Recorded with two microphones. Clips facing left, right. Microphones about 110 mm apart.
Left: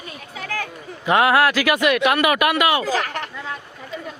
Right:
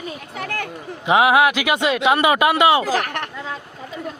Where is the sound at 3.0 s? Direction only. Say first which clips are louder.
Right 1 dB; 60° right (ahead or behind).